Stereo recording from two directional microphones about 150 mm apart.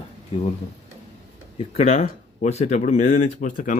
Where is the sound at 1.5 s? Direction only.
45° left (ahead or behind).